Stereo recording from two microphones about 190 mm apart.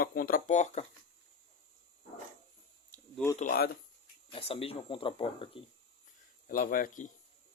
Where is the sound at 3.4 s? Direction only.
50° left (ahead or behind).